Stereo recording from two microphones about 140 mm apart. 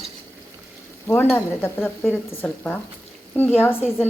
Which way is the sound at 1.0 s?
15° left (ahead or behind).